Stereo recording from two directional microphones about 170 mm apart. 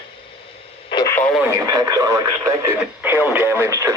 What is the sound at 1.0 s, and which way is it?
Radio, 10° left (ahead or behind).